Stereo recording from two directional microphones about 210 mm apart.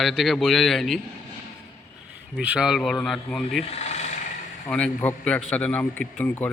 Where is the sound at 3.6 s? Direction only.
30° left (ahead or behind).